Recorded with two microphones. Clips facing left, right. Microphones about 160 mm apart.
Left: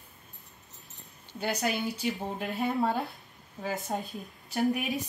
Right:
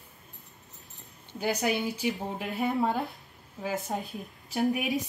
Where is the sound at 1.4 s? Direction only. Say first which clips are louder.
Right 2 dB; 10° right (ahead or behind).